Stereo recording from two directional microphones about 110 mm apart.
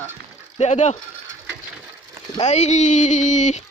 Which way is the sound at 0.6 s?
90° left.